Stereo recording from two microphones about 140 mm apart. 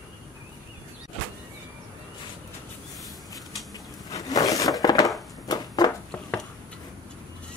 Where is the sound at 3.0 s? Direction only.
Centre (ahead or behind).